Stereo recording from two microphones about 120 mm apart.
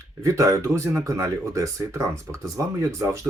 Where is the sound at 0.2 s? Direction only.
25° right (ahead or behind).